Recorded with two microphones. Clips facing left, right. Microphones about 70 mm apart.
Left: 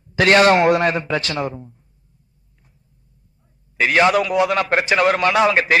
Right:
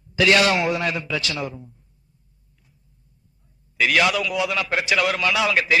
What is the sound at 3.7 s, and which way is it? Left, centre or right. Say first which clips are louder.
A man's voice: left 4 dB; left.